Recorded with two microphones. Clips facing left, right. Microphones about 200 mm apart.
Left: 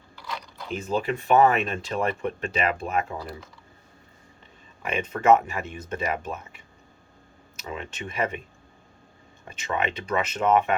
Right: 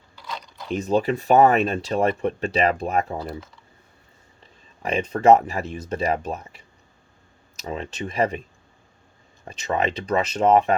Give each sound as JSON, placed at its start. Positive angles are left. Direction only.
{"t": 0.7, "sound": "speech", "side_deg": -35}
{"t": 4.8, "sound": "speech", "side_deg": -35}
{"t": 7.6, "sound": "speech", "side_deg": -35}
{"t": 9.5, "sound": "speech", "side_deg": -35}